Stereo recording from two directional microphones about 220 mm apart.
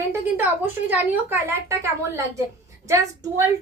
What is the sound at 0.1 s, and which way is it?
Speech, 10° right (ahead or behind).